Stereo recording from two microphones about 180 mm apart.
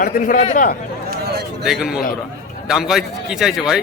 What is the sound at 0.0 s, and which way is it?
Speech, 50° left (ahead or behind).